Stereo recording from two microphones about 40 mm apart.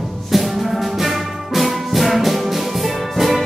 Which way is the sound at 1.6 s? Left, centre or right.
Centre.